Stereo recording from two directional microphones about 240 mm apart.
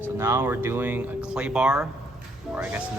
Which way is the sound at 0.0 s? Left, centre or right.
Centre.